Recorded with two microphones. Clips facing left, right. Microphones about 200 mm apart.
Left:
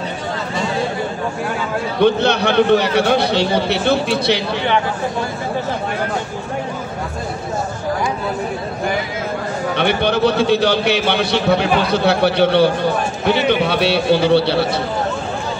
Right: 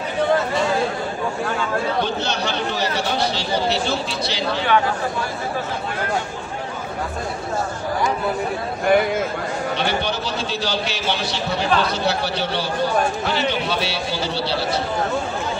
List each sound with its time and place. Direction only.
2.0 s a man's voice: 60° left (ahead or behind)
9.8 s a man's voice: 60° left (ahead or behind)